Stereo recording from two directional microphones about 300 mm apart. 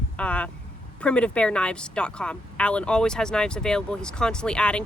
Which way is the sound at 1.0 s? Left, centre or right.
Centre.